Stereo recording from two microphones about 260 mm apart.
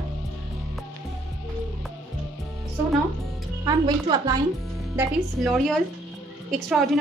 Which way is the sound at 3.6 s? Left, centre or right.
Centre.